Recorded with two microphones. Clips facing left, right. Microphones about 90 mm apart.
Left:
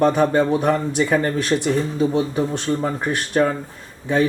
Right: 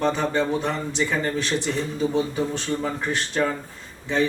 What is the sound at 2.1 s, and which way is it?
Speech, 15° left (ahead or behind).